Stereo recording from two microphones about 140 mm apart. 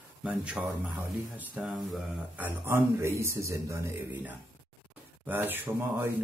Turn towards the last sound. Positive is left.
turn(degrees=-15)  # may be behind; listen again after turning